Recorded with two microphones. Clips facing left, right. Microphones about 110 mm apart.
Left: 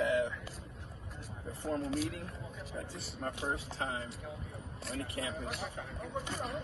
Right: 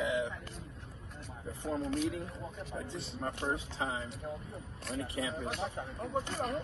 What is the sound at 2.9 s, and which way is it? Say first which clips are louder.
Speech: right 4 dB; 25° right (ahead or behind).